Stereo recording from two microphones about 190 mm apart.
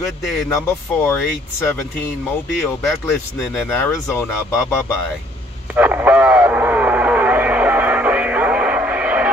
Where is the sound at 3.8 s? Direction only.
15° left (ahead or behind).